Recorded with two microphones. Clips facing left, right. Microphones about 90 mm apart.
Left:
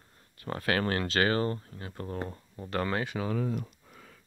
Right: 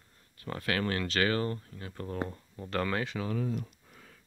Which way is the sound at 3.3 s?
75° left (ahead or behind).